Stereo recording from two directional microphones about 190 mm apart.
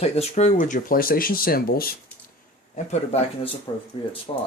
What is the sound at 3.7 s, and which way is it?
Speech, 25° left (ahead or behind).